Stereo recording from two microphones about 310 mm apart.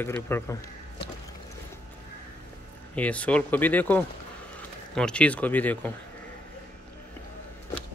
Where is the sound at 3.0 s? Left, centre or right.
Centre.